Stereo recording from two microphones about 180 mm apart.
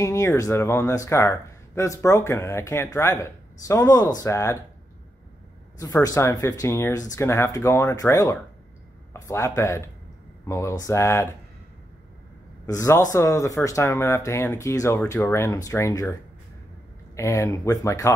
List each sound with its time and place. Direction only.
0.0 s speech: 15° left (ahead or behind)
6.0 s speech: 20° left (ahead or behind)
12.6 s speech: 15° left (ahead or behind)